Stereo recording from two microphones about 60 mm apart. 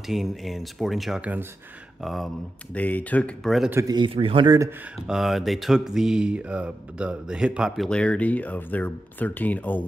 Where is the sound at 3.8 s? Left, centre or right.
Right.